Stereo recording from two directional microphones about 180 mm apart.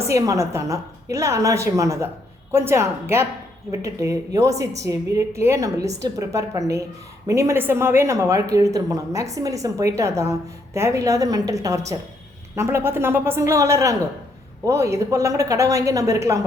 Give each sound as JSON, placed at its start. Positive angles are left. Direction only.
{"t": 0.0, "sound": "speech", "side_deg": -15}